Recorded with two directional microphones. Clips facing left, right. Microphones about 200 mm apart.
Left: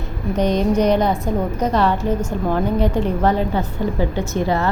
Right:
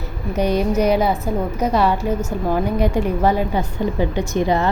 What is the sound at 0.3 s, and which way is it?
A woman's voice, 10° right (ahead or behind).